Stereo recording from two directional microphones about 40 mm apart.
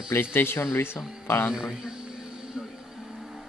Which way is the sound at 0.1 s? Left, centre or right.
Left.